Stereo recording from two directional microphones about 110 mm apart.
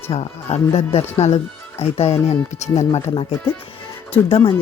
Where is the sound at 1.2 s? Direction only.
90° left.